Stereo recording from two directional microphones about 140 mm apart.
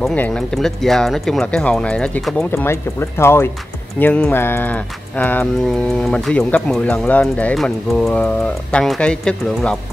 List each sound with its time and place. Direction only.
0.1 s speech: 5° left (ahead or behind)
2.5 s speech: 15° left (ahead or behind)